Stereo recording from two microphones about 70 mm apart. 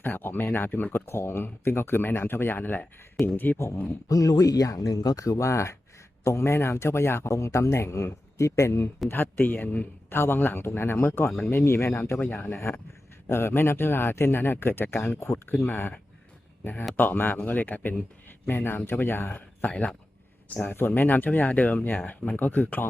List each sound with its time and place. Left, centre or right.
0.0 s speech: left
4.1 s speech: left
9.0 s speech: left
12.2 s speech: left
15.6 s speech: left
17.0 s speech: left
18.3 s a sound: left
18.9 s speech: left